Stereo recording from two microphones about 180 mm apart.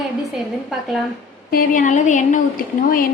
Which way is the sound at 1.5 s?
45° left (ahead or behind).